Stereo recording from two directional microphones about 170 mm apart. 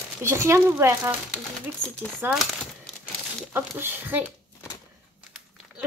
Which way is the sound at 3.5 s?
10° right (ahead or behind).